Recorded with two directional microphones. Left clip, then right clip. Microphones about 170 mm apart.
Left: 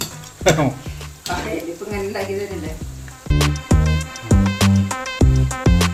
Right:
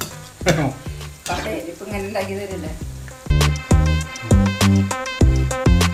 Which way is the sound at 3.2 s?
Centre (ahead or behind).